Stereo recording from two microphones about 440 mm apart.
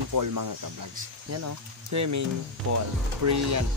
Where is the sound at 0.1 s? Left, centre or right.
Right.